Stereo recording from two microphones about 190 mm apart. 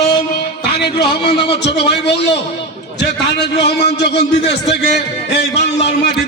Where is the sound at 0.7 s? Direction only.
60° left (ahead or behind).